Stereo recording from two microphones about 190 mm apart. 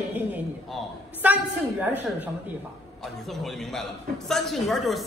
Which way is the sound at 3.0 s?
Centre (ahead or behind).